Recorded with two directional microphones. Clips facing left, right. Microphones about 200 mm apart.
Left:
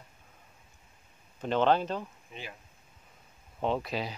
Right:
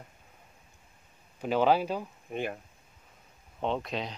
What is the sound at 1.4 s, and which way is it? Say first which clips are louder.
Speech: right 1 dB; 5° right (ahead or behind).